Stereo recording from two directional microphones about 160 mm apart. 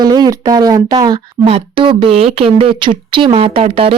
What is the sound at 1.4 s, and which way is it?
Speech, 35° right (ahead or behind).